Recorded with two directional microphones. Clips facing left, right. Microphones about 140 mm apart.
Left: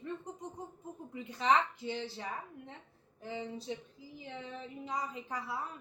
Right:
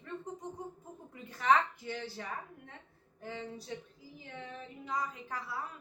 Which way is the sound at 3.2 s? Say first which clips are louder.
Left 2 dB; 20° left (ahead or behind).